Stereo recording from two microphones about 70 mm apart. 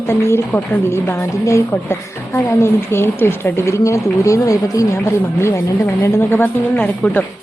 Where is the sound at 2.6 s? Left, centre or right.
Left.